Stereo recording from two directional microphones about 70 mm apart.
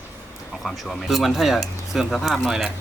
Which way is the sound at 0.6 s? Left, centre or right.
Centre.